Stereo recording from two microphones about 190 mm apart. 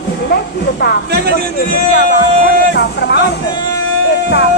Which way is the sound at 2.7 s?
65° left (ahead or behind).